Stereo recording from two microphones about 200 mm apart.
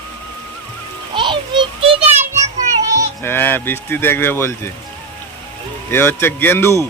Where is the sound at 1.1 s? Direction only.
25° right (ahead or behind).